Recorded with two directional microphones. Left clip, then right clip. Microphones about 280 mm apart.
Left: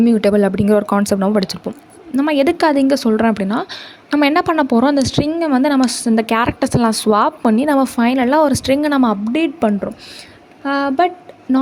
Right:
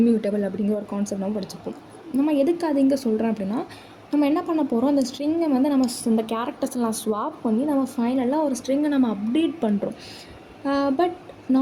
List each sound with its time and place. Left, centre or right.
0.0 s speech: left
4.5 s speech: left
4.9 s speech: left
6.1 s speech: left
7.4 s speech: left